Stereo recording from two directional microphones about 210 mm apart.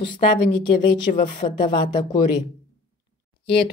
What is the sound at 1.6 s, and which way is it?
Speech, 20° left (ahead or behind).